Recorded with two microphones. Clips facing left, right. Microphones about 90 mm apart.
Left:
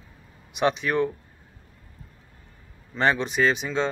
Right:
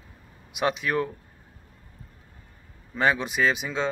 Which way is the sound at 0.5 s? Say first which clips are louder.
Left 2 dB; 5° right (ahead or behind).